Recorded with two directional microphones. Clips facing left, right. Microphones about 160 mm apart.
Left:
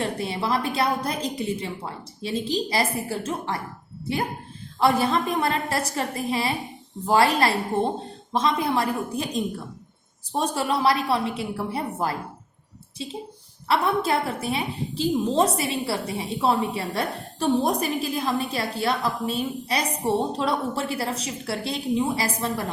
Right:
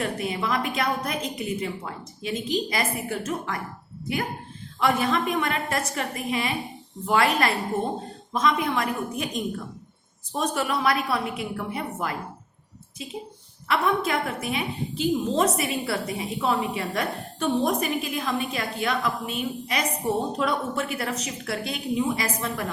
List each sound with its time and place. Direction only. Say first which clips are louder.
0.0 s a woman's voice: left 1 dB; 30° left (ahead or behind)
4.8 s a woman's voice: left 2 dB; 35° left (ahead or behind)